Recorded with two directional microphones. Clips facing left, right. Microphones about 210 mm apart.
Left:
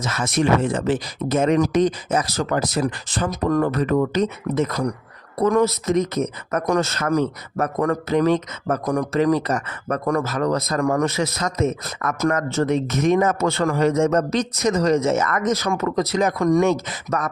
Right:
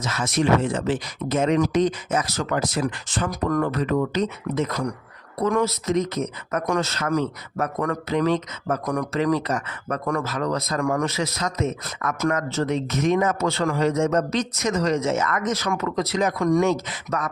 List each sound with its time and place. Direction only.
0.0 s speech: 50° left (ahead or behind); by 3.7 s 30° left (ahead or behind)
3.7 s speech: 45° left (ahead or behind)
8.8 s speech: 30° left (ahead or behind)